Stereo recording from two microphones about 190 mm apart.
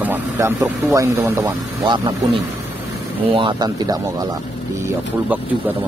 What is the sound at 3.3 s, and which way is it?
Speech, 25° right (ahead or behind).